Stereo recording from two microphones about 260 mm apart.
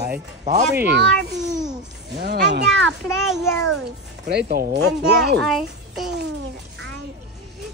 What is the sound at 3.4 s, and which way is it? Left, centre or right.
Speech, centre.